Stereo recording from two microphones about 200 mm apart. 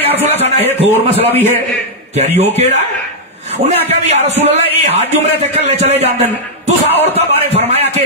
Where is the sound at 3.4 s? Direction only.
35° right (ahead or behind).